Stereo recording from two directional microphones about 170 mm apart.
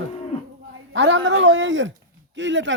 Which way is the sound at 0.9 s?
90° right.